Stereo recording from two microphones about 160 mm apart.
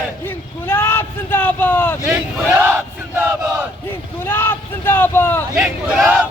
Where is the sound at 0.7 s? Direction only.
15° left (ahead or behind).